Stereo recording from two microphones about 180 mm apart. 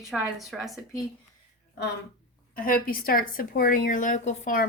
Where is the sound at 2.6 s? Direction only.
50° left (ahead or behind).